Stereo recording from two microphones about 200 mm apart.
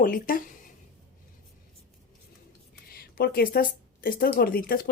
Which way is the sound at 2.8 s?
50° left (ahead or behind).